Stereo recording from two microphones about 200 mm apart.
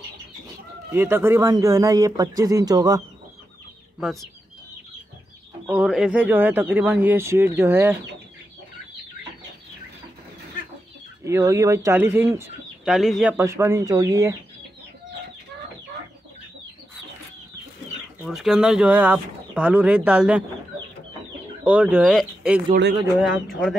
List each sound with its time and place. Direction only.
0.9 s speech: 10° right (ahead or behind)
4.0 s speech: centre (ahead or behind)
5.7 s speech: 5° right (ahead or behind)
11.2 s speech: 15° right (ahead or behind)
18.2 s speech: centre (ahead or behind)
21.6 s speech: 10° right (ahead or behind)